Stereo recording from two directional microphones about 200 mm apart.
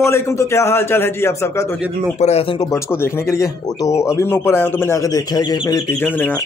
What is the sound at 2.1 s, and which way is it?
Speech, 30° left (ahead or behind).